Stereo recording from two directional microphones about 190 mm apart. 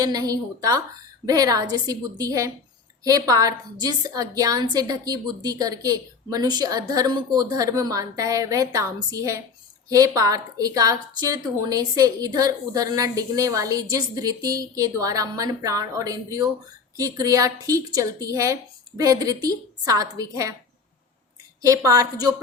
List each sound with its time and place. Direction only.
0.0 s a woman's voice: 20° right (ahead or behind)
21.6 s speech: 15° right (ahead or behind)